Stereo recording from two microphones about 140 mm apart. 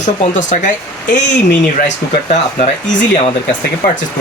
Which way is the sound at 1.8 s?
55° left (ahead or behind).